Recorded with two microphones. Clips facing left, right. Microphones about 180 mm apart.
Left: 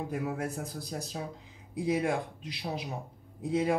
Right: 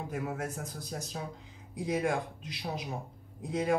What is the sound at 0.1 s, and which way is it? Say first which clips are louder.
Speech: left 2 dB; 35° left (ahead or behind).